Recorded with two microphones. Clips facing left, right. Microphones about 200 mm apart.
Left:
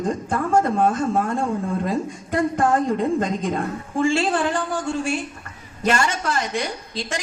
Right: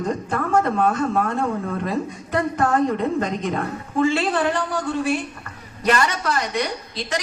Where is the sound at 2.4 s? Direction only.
30° left (ahead or behind).